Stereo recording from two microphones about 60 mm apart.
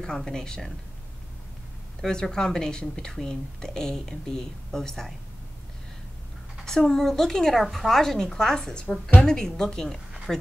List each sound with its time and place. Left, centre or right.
0.0 s speech: centre
2.0 s speech: centre
6.6 s speech: centre